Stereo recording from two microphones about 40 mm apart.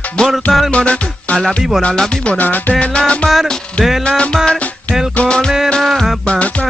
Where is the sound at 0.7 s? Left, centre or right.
Left.